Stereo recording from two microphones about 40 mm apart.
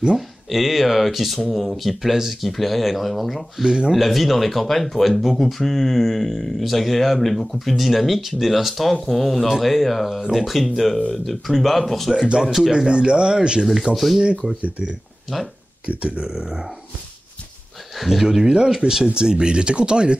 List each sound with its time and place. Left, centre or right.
0.5 s speech: centre
3.6 s speech: right
3.9 s speech: centre
12.4 s speech: centre
12.7 s speech: right
13.7 s speech: centre
14.6 s speech: right
15.3 s speech: centre
15.8 s speech: right
17.9 s speech: centre; by 20.2 s right